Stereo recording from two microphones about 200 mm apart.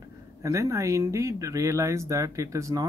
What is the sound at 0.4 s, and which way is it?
Speech, 15° right (ahead or behind).